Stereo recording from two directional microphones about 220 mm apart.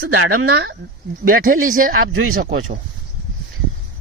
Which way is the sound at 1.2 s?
40° right (ahead or behind).